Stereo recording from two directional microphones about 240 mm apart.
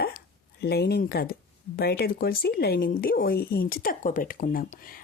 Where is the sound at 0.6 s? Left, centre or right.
Left.